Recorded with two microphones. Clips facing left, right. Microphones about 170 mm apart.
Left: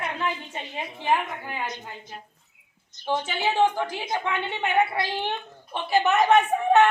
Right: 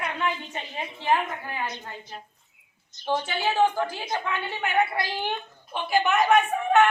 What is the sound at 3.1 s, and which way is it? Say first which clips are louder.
A woman's voice: even; 15° left (ahead or behind).